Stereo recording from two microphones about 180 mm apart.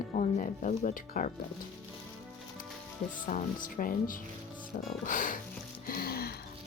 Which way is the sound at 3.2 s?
50° left (ahead or behind).